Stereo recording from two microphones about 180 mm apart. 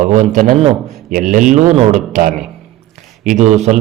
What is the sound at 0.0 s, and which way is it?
A man's voice, 45° right (ahead or behind).